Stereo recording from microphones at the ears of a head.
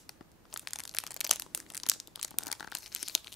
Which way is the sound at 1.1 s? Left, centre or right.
Left.